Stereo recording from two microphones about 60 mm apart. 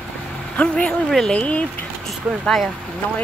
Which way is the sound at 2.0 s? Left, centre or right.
Centre.